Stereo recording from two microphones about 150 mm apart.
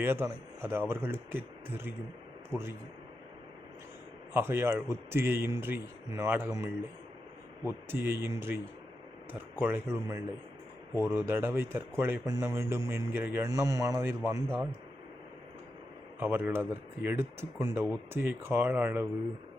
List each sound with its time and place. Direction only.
0.0 s speech: 15° right (ahead or behind)
4.4 s speech: 15° right (ahead or behind)
7.9 s speech: 15° right (ahead or behind)
16.2 s speech: 10° right (ahead or behind)